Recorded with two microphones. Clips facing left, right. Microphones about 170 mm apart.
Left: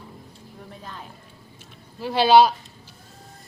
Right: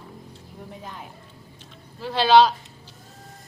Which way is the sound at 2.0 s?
10° left (ahead or behind).